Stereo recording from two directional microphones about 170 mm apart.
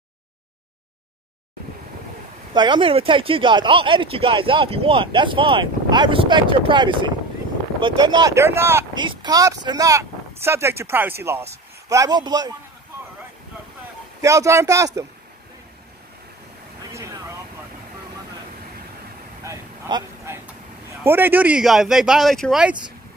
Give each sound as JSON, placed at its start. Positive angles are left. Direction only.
{"t": 2.5, "sound": "speech", "side_deg": -25}
{"t": 8.9, "sound": "speech", "side_deg": -25}
{"t": 14.2, "sound": "speech", "side_deg": -20}
{"t": 16.9, "sound": "vehicle", "side_deg": -20}
{"t": 19.4, "sound": "a sound", "side_deg": -20}
{"t": 21.0, "sound": "speech", "side_deg": -10}